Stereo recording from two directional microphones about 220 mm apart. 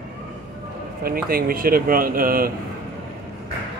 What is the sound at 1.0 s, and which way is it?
Speech, 40° right (ahead or behind).